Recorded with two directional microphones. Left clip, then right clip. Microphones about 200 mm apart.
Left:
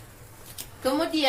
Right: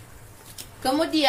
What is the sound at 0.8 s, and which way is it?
Speech, 55° right (ahead or behind).